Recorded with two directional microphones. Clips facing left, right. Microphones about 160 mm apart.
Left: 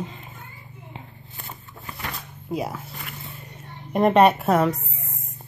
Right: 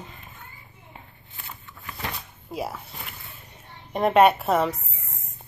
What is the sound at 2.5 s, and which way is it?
Speech, centre (ahead or behind).